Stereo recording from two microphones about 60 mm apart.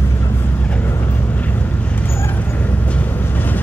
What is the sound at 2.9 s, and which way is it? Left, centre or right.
Train, left.